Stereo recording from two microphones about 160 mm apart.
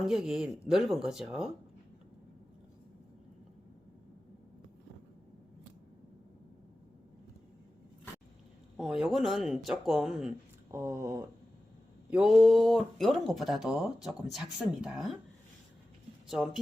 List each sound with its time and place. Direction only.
0.0 s speech: 5° right (ahead or behind)
8.8 s speech: centre (ahead or behind)
10.7 s speech: 20° right (ahead or behind)
12.1 s speech: 5° right (ahead or behind)
16.3 s speech: centre (ahead or behind)